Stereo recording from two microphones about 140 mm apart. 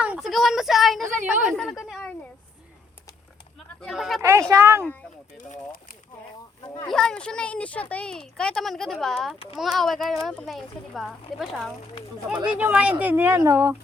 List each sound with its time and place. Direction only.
0.0 s speech: 5° right (ahead or behind)
1.0 s a woman's voice: 65° right (ahead or behind)
1.5 s a woman's voice: centre (ahead or behind)
3.8 s speech: centre (ahead or behind)
4.2 s speech: 20° right (ahead or behind)
5.4 s speech: 75° left (ahead or behind)
6.9 s speech: 5° left (ahead or behind); by 13.7 s 20° right (ahead or behind)